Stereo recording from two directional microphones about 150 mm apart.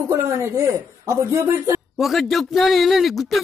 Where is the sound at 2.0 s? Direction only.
Centre (ahead or behind).